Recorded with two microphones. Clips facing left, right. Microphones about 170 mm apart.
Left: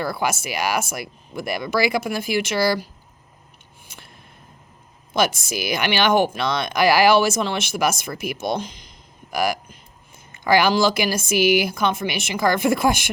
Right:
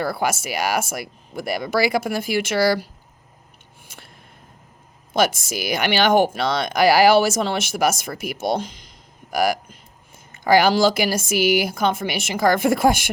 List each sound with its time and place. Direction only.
0.1 s speech: 45° right (ahead or behind)
5.7 s speech: 45° right (ahead or behind)